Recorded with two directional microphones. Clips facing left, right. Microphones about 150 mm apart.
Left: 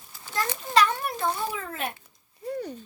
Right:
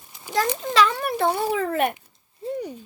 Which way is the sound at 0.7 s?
90° right.